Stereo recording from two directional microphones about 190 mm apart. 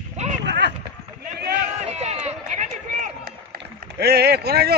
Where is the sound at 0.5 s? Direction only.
65° right (ahead or behind).